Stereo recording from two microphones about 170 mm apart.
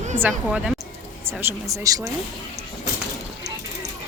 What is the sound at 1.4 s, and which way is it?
Speech, 20° right (ahead or behind).